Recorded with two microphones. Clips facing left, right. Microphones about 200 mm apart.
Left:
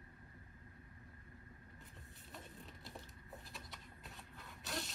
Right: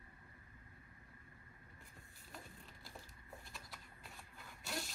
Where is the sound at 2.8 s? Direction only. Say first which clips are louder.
Even; centre (ahead or behind).